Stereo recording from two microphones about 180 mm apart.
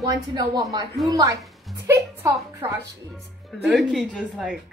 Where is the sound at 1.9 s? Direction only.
15° right (ahead or behind).